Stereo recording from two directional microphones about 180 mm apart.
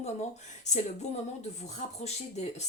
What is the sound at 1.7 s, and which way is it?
Speech, 40° left (ahead or behind).